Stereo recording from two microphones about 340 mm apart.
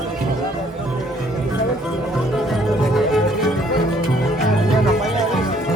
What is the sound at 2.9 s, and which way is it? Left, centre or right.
Music, centre.